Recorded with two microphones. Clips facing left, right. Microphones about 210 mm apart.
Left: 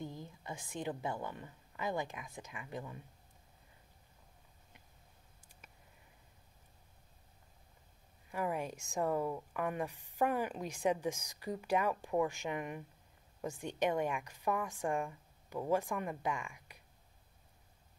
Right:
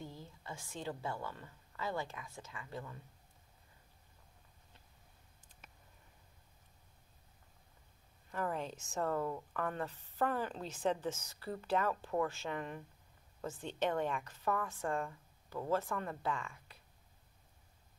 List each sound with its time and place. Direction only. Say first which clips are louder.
0.0 s a woman's voice: left 4 dB; 15° left (ahead or behind)
8.3 s speech: left 2 dB; 10° left (ahead or behind)